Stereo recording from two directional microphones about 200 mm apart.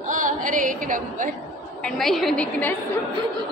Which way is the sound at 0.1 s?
40° right (ahead or behind).